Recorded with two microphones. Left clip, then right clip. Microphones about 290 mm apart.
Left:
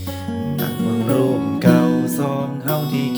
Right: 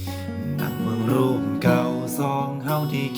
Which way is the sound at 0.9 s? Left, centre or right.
Centre.